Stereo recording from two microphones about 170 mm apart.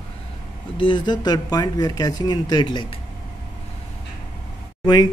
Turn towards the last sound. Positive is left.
turn(degrees=25)  # may be behind; listen again after turning